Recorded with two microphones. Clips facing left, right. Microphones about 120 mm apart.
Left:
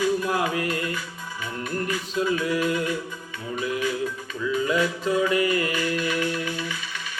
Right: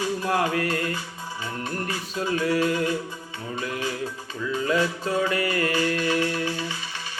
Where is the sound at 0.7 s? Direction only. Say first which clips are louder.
Right 1 dB; 30° right (ahead or behind).